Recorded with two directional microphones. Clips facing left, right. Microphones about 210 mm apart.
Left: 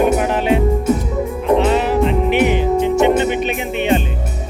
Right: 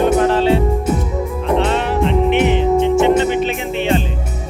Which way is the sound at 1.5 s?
5° left (ahead or behind).